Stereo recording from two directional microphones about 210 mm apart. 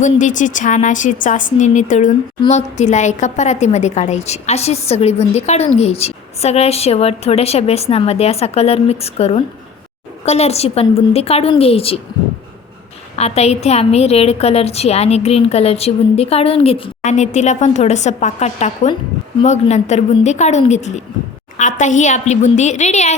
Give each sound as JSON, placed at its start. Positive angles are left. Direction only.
{"t": 0.0, "sound": "a woman's voice", "side_deg": 35}
{"t": 13.1, "sound": "a woman's voice", "side_deg": 30}